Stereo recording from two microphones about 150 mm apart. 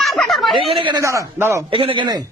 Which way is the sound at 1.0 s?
20° right (ahead or behind).